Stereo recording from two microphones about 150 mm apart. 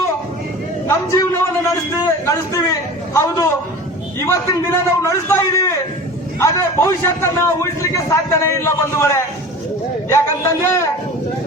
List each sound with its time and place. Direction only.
0.9 s a man's voice: 20° left (ahead or behind)